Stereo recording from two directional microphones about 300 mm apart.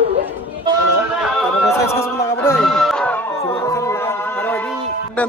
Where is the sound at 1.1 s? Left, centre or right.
Centre.